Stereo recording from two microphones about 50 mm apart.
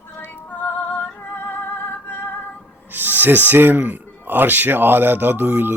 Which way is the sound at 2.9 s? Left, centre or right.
Right.